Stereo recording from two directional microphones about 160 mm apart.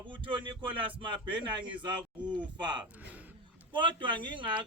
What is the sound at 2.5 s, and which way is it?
Speech, 30° right (ahead or behind).